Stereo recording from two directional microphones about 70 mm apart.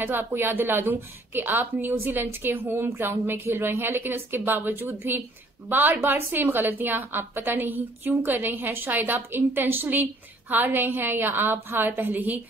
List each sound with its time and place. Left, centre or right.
0.0 s a woman's voice: right